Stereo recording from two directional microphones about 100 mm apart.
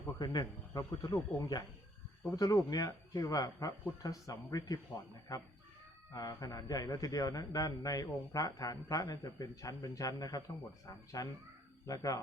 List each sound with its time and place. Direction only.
0.2 s speech: 45° left (ahead or behind)
0.8 s a man's voice: 35° left (ahead or behind)
6.1 s a man's voice: 40° left (ahead or behind)